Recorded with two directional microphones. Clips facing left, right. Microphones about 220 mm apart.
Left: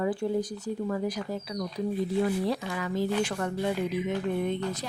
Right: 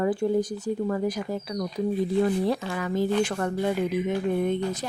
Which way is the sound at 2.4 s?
50° right (ahead or behind).